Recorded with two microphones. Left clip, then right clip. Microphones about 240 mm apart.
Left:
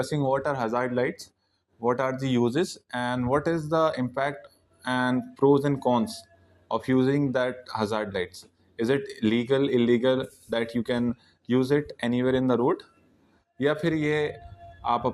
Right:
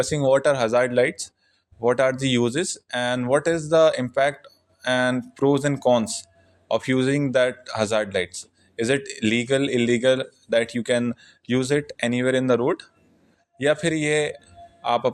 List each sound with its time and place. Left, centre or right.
0.0 s speech: right
2.5 s a man's voice: centre